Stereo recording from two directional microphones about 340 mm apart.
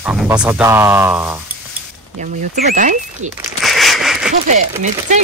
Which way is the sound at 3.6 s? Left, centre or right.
Centre.